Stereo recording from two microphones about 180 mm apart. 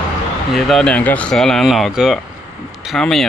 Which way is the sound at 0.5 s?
Centre (ahead or behind).